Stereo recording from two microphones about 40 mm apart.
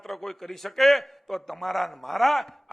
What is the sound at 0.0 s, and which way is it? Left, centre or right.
A man's voice, centre.